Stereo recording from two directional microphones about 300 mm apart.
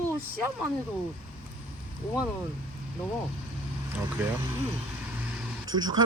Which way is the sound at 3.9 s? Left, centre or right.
Centre.